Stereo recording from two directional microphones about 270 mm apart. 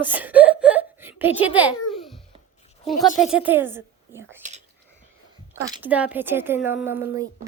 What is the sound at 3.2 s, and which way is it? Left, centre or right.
A woman's voice, centre.